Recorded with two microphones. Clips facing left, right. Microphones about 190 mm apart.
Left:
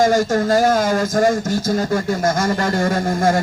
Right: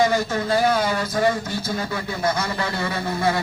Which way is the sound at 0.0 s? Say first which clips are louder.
Left 5 dB; 45° left (ahead or behind).